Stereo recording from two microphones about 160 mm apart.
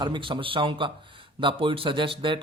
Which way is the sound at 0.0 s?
30° right (ahead or behind).